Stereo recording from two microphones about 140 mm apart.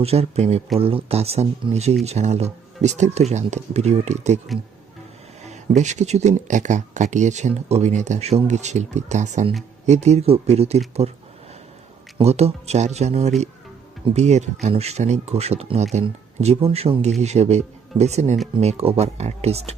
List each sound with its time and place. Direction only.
0.0 s speech: 45° right (ahead or behind)
5.5 s speech: 55° right (ahead or behind)
12.1 s speech: 50° right (ahead or behind)